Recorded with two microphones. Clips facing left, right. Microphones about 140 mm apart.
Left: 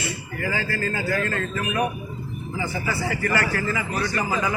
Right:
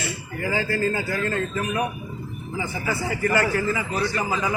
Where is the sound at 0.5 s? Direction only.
20° right (ahead or behind).